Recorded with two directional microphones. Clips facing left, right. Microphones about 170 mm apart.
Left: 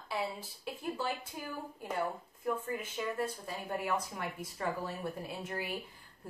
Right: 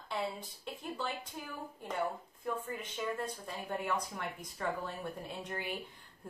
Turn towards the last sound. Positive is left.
turn(degrees=5)  # may be behind; listen again after turning